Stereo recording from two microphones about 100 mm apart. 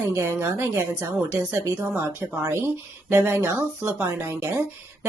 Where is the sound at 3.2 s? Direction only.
25° right (ahead or behind).